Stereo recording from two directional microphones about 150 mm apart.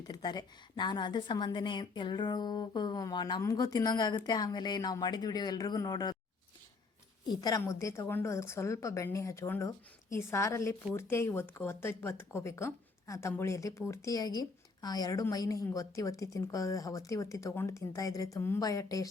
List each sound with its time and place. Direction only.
0.1 s speech: 30° left (ahead or behind)
7.3 s speech: 25° left (ahead or behind)